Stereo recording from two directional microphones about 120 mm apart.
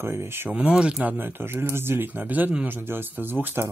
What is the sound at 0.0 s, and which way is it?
Speech, 20° right (ahead or behind).